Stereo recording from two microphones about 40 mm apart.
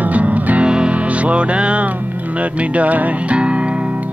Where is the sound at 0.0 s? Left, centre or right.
Right.